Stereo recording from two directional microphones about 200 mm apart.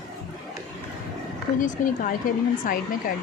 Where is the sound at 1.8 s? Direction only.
40° left (ahead or behind).